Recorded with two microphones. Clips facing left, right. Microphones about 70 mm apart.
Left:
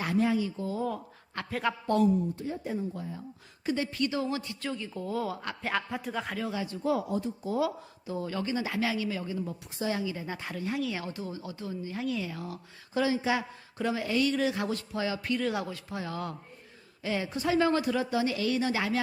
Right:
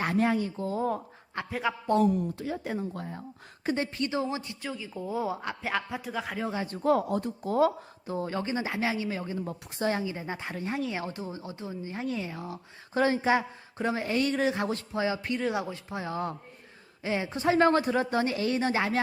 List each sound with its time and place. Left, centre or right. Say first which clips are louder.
0.0 s speech: right 1 dB; right
1.5 s speech: even; centre
2.0 s a woman's voice: even; right
3.9 s a woman's voice: even; right
4.6 s speech: left 1 dB; centre
5.6 s speech: left 1 dB; centre
6.3 s speech: right 1 dB; right
9.7 s a woman's voice: right 3 dB; right
10.0 s a woman's voice: right 1 dB; right
12.9 s a woman's voice: right 3 dB; right
17.6 s speech: right 4 dB; right